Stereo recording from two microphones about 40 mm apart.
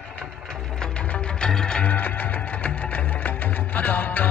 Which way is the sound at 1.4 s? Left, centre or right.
Left.